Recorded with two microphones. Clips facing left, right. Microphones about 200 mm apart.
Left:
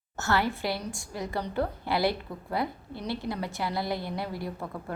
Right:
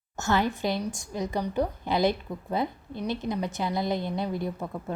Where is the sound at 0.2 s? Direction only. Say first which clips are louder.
Right 2 dB; 15° right (ahead or behind).